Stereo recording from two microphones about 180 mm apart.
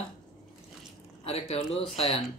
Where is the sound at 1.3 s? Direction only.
35° left (ahead or behind).